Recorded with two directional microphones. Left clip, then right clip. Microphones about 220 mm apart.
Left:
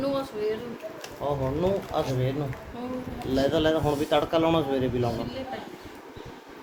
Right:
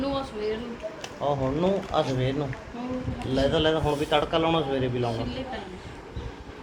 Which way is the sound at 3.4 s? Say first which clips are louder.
Even; 30° left (ahead or behind).